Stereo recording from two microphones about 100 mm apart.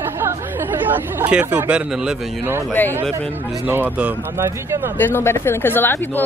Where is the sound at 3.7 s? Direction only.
20° right (ahead or behind).